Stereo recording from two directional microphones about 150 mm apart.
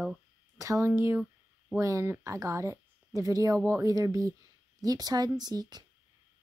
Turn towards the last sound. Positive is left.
turn(degrees=-25)  # may be behind; listen again after turning